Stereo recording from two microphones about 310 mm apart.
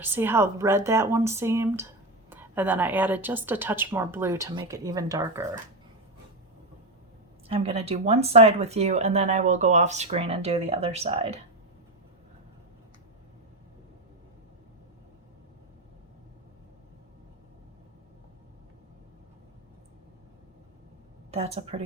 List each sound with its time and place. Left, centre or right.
0.0 s a woman's voice: centre
7.4 s speech: centre
21.2 s a woman's voice: centre